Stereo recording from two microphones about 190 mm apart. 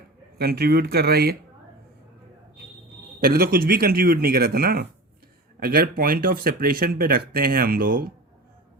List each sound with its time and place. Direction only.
0.3 s speech: 55° right (ahead or behind)
3.2 s speech: 50° right (ahead or behind)